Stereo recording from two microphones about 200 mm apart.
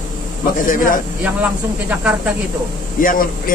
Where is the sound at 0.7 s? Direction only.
45° left (ahead or behind).